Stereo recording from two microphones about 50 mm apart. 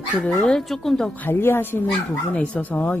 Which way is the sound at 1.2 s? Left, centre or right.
Left.